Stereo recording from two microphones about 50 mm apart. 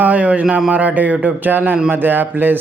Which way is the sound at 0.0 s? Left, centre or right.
Right.